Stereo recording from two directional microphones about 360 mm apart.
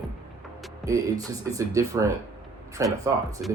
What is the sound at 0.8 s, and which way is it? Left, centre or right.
Speech, centre.